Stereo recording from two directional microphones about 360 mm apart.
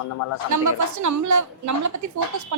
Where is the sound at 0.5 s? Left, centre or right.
Right.